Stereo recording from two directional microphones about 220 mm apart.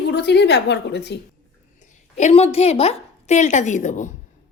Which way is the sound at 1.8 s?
35° left (ahead or behind).